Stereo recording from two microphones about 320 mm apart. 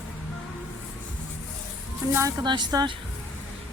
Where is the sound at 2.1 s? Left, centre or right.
Centre.